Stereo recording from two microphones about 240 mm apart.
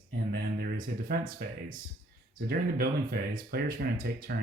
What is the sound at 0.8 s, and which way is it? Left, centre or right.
Speech, right.